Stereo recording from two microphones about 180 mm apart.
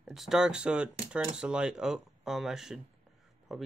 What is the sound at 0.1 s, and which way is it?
Speech, centre (ahead or behind).